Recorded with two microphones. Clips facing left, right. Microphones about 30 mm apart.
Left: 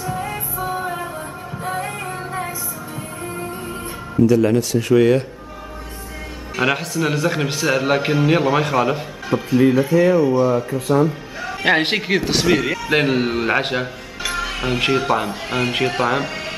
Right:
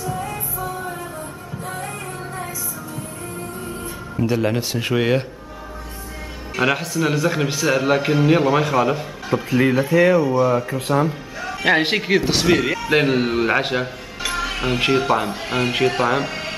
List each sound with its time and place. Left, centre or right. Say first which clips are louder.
0.0 s music: left 1 dB; left
4.2 s speech: left 6 dB; right
6.5 s speech: even; centre
9.5 s speech: left 3 dB; right
10.2 s speech: left 2 dB; centre
10.7 s speech: left 2 dB; right
11.4 s a man's voice: even; centre